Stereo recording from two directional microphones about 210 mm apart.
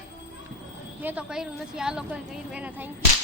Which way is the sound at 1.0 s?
5° right (ahead or behind).